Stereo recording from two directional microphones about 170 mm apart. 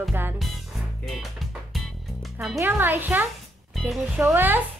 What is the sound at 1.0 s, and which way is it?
Music, centre (ahead or behind).